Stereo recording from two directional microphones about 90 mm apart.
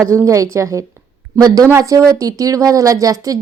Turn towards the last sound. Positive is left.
turn(degrees=-40)  # may be behind; listen again after turning